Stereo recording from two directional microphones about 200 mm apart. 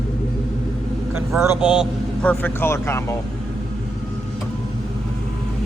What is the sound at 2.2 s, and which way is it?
Speech, 5° left (ahead or behind).